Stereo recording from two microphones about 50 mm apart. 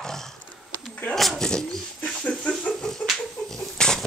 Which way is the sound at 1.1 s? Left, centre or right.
Centre.